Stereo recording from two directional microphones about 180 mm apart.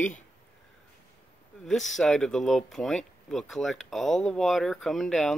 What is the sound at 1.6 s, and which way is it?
Speech, centre (ahead or behind).